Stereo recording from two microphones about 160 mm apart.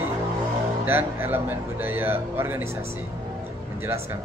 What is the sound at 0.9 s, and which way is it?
Speech, 15° right (ahead or behind).